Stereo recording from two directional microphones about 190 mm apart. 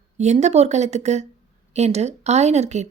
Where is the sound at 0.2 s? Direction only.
35° right (ahead or behind).